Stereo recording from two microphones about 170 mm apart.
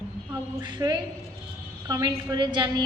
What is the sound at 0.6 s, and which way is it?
A woman's voice, 25° right (ahead or behind).